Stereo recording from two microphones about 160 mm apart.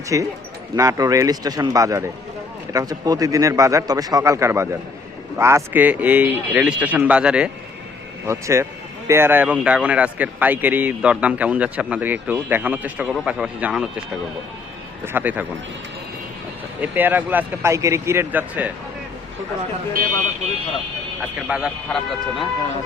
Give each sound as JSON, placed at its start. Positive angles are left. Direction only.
{"t": 0.1, "sound": "a man's voice", "side_deg": -20}
{"t": 8.3, "sound": "a man's voice", "side_deg": -20}
{"t": 15.0, "sound": "a man's voice", "side_deg": -10}
{"t": 16.8, "sound": "a man's voice", "side_deg": -10}
{"t": 21.4, "sound": "speech", "side_deg": -5}